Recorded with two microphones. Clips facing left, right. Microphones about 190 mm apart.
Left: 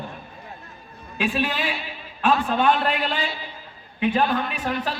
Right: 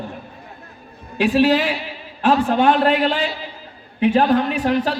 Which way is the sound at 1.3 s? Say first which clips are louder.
Right 10 dB; 75° right (ahead or behind).